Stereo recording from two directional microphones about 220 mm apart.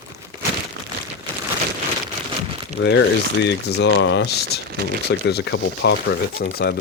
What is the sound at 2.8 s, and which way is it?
Speech, 60° left (ahead or behind).